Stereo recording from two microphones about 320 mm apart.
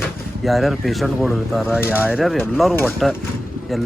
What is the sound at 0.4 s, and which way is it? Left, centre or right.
Speech, centre.